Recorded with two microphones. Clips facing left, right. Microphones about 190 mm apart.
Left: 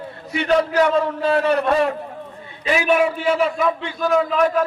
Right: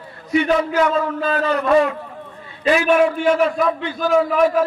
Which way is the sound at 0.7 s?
30° left (ahead or behind).